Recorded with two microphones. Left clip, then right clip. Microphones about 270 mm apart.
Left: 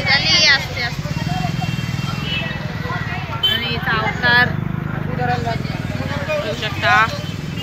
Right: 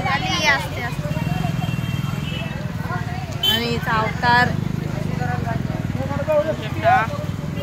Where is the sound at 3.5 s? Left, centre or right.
Centre.